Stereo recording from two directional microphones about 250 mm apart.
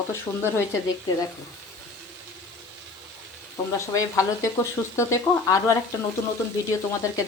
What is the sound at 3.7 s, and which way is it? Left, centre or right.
Speech, centre.